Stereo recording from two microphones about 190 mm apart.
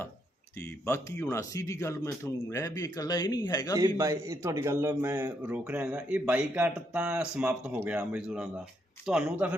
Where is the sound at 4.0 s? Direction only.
15° right (ahead or behind).